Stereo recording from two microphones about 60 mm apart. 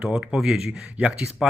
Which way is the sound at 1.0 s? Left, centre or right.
Right.